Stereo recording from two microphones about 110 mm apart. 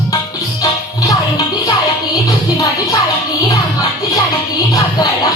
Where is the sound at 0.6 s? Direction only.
30° left (ahead or behind).